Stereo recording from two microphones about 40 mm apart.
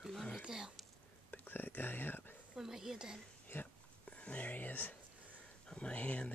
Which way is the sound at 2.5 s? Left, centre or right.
Centre.